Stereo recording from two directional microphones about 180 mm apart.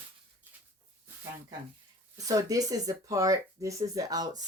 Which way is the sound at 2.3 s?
20° right (ahead or behind).